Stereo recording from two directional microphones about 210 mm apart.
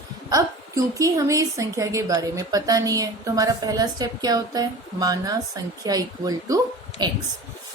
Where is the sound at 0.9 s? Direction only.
15° right (ahead or behind).